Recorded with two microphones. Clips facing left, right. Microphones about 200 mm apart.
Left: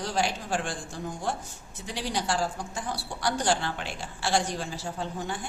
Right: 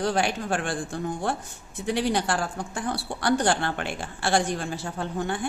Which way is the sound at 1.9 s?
60° right (ahead or behind).